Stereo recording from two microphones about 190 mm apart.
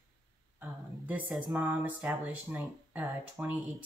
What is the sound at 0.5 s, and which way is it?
Speech, 10° right (ahead or behind).